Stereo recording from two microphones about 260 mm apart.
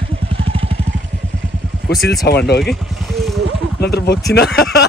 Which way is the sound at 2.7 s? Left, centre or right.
Centre.